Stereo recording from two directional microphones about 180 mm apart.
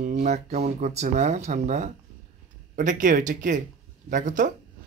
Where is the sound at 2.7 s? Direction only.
45° right (ahead or behind).